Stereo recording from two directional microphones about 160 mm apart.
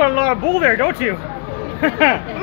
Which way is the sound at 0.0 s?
10° right (ahead or behind).